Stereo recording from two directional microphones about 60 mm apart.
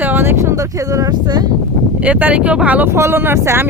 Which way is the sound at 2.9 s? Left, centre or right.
Right.